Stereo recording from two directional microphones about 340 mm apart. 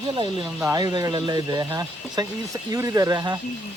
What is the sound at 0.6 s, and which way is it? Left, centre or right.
Speech, centre.